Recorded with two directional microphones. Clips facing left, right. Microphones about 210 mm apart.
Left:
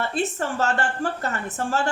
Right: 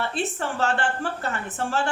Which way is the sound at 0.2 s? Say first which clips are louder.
Left 3 dB; 40° left (ahead or behind).